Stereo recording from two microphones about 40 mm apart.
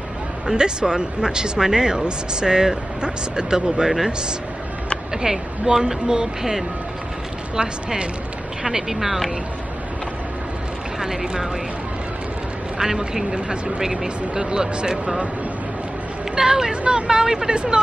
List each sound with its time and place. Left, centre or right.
0.5 s speech: centre
5.1 s a woman's voice: centre
8.6 s a woman's voice: centre
11.0 s speech: centre
12.7 s a woman's voice: centre
16.3 s a woman's voice: centre